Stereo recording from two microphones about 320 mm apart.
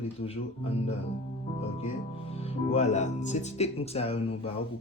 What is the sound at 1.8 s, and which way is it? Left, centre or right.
Speech, centre.